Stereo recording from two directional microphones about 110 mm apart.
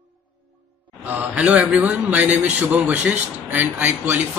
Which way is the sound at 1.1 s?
10° right (ahead or behind).